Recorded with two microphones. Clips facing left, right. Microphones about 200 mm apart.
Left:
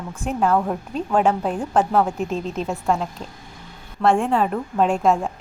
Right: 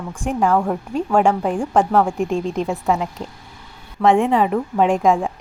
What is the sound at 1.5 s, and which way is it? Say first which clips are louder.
Speech: right 3 dB; 15° right (ahead or behind).